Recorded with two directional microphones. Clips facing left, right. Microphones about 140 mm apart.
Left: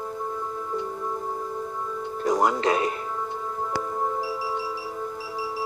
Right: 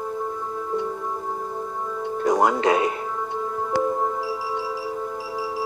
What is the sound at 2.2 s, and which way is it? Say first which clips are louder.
Music: right 3 dB; 45° right (ahead or behind).